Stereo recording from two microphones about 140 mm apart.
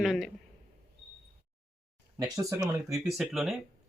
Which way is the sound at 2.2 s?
25° right (ahead or behind).